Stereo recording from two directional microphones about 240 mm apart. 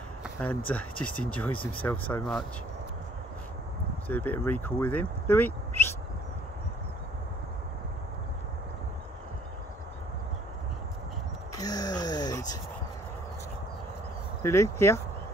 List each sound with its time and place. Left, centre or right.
0.2 s a sound: centre
0.7 s speech: centre
4.1 s speech: centre
11.5 s groan: centre
14.4 s speech: centre